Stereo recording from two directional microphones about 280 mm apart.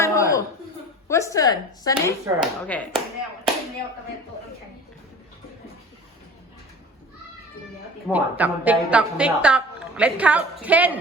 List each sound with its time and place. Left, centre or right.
0.0 s a sound: centre
1.0 s a woman's voice: centre
2.4 s a woman's voice: centre
8.0 s a woman's voice: centre